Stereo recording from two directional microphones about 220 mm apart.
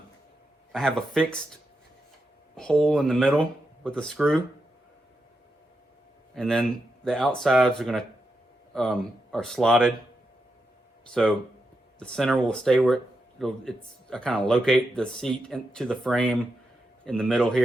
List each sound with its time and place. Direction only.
0.7 s speech: centre (ahead or behind)
2.6 s speech: centre (ahead or behind)
6.3 s speech: 5° left (ahead or behind)
11.1 s speech: 5° left (ahead or behind)